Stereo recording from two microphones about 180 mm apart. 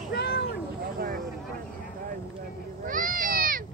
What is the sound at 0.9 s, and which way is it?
Vehicle, 55° right (ahead or behind).